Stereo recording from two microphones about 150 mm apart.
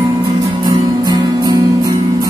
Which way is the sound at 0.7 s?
25° right (ahead or behind).